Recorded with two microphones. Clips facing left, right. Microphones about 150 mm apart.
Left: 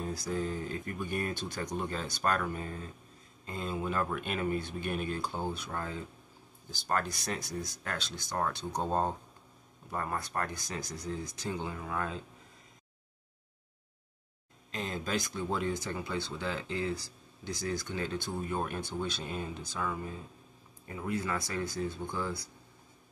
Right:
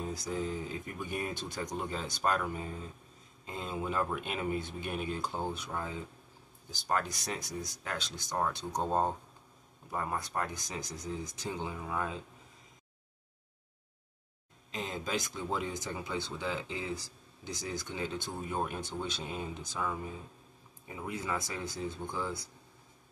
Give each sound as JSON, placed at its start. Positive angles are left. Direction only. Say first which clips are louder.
{"t": 0.0, "sound": "speech", "louder": "left 1 dB", "side_deg": -15}
{"t": 14.7, "sound": "speech", "louder": "left 1 dB", "side_deg": -15}